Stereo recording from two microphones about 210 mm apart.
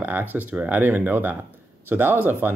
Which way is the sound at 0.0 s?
10° right (ahead or behind).